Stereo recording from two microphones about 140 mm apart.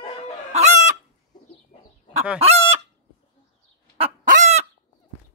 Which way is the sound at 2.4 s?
45° right (ahead or behind).